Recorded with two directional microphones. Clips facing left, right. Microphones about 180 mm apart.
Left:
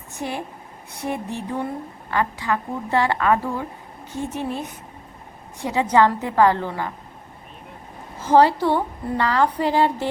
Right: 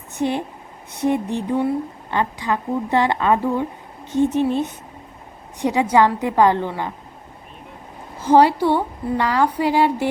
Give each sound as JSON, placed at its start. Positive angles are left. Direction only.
{"t": 0.1, "sound": "a woman's voice", "side_deg": -20}
{"t": 8.2, "sound": "a woman's voice", "side_deg": -15}